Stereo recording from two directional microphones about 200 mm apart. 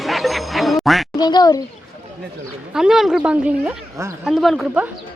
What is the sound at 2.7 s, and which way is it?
A man's voice, centre (ahead or behind).